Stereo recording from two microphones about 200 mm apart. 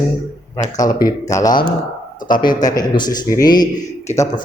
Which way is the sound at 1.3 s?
15° left (ahead or behind).